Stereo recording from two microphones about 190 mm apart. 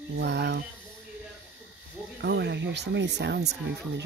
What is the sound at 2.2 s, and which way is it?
Speech, 65° right (ahead or behind).